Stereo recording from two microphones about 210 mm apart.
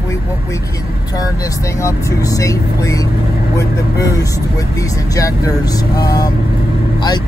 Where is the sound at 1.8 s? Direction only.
15° left (ahead or behind).